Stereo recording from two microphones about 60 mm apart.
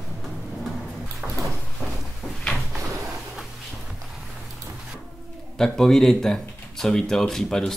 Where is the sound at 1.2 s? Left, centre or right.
Centre.